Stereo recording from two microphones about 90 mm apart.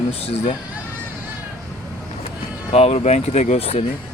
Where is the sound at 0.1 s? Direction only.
90° left.